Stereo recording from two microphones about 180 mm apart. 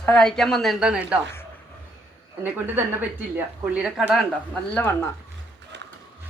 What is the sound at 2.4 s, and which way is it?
A woman's voice, 10° right (ahead or behind).